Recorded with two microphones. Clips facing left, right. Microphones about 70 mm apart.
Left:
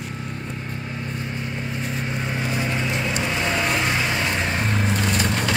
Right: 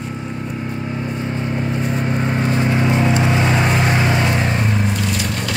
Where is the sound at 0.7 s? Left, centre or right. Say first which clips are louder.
Right 7 dB; right.